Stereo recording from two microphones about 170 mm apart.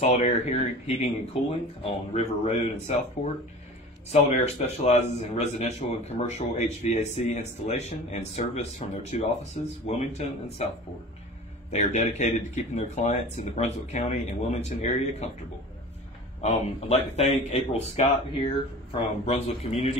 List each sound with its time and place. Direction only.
0.0 s a man's voice: 40° left (ahead or behind)
4.1 s a man's voice: 40° left (ahead or behind)
11.7 s speech: 40° left (ahead or behind)
16.3 s a man's voice: 40° left (ahead or behind)
19.2 s a man's voice: 40° left (ahead or behind)